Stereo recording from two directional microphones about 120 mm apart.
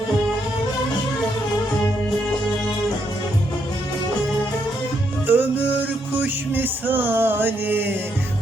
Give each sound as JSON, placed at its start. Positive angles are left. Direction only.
{"t": 5.2, "sound": "music", "side_deg": -15}